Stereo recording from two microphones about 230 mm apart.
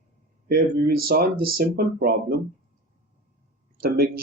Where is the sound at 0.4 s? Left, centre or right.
Right.